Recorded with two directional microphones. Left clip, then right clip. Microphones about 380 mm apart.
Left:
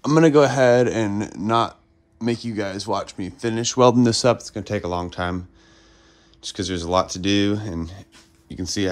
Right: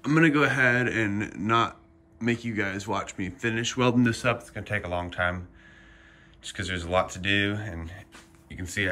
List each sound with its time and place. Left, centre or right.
0.2 s speech: centre
6.5 s speech: centre